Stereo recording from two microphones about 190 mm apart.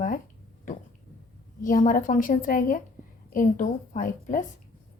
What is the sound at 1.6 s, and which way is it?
A woman's voice, 45° left (ahead or behind).